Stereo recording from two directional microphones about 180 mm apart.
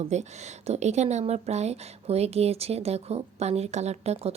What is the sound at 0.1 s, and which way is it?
Speech, 40° right (ahead or behind).